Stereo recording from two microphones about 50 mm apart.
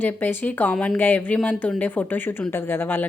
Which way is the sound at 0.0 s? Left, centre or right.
Left.